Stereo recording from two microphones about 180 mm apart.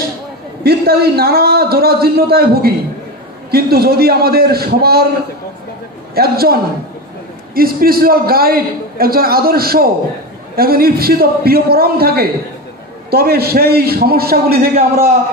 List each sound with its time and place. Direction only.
0.7 s a man's voice: 60° right (ahead or behind)
6.1 s a man's voice: 60° right (ahead or behind)